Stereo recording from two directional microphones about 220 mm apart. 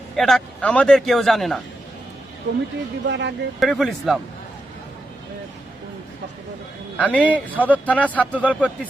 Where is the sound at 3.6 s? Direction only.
Centre (ahead or behind).